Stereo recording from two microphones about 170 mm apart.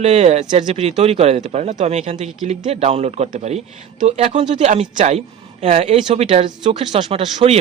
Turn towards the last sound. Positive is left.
turn(degrees=-35)  # may be behind; listen again after turning